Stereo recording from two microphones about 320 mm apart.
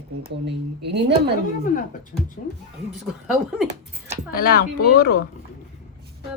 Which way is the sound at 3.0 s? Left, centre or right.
Centre.